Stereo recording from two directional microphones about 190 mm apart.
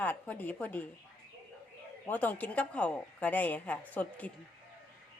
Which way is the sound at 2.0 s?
10° left (ahead or behind).